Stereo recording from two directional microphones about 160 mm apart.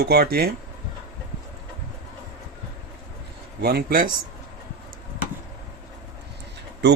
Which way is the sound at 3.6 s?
75° right (ahead or behind).